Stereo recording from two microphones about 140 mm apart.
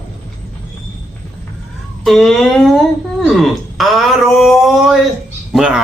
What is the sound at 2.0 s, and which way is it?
Speech, centre (ahead or behind).